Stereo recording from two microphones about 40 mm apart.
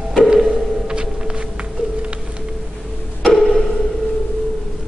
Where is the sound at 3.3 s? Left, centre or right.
Centre.